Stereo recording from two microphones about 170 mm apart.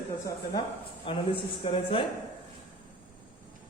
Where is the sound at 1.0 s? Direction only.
30° left (ahead or behind).